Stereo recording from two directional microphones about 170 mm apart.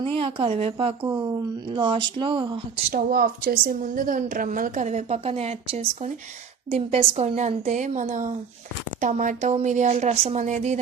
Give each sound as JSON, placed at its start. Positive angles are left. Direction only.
{"t": 0.0, "sound": "a woman's voice", "side_deg": -30}
{"t": 1.0, "sound": "speech", "side_deg": -20}
{"t": 2.9, "sound": "a woman's voice", "side_deg": -60}